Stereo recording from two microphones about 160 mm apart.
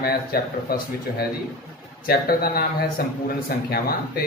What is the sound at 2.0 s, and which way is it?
Speech, 70° left (ahead or behind).